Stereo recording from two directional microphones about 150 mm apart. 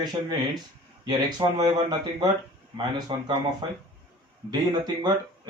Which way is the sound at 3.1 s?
35° right (ahead or behind).